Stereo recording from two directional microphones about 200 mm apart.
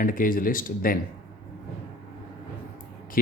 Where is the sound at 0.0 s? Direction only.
45° left (ahead or behind).